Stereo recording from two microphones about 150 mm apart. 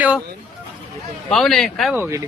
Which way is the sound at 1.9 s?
15° right (ahead or behind).